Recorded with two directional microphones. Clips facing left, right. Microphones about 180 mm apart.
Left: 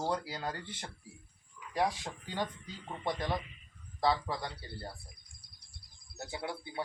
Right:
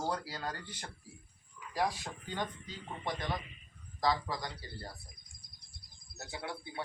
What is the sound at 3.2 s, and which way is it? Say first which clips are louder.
Speech: left 3 dB; 25° left (ahead or behind).